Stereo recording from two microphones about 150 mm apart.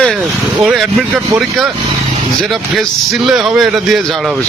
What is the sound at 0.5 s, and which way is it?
A man's voice, 5° right (ahead or behind).